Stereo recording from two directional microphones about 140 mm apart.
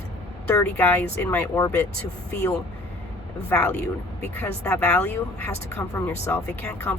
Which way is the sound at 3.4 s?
10° left (ahead or behind).